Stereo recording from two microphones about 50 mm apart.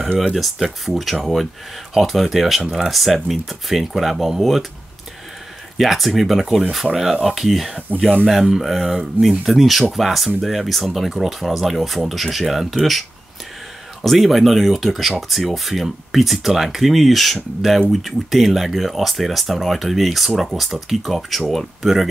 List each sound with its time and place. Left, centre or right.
0.3 s speech: centre
5.8 s speech: centre
14.0 s speech: centre